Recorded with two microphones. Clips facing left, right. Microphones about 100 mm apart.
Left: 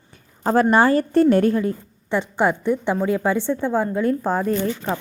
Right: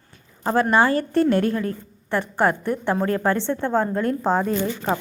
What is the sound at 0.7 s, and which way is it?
A woman's voice, 35° left (ahead or behind).